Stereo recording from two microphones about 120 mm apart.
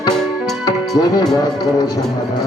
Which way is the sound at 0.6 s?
35° left (ahead or behind).